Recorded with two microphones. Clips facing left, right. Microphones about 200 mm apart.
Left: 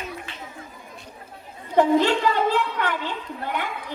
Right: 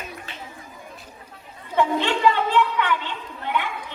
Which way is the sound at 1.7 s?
40° left (ahead or behind).